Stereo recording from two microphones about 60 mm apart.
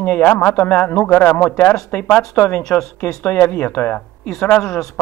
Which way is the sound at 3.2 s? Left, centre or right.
Left.